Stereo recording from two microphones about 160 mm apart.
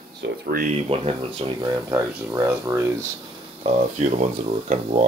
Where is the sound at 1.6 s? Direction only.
15° right (ahead or behind).